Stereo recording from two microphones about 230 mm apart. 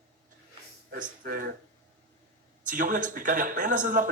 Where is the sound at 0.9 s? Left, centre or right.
Right.